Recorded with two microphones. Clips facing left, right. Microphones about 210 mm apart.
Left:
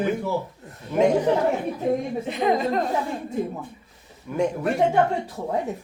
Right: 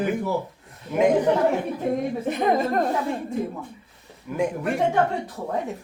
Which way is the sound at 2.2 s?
50° right (ahead or behind).